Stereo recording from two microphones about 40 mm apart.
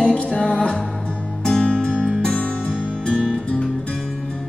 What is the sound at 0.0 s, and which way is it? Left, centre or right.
Music, left.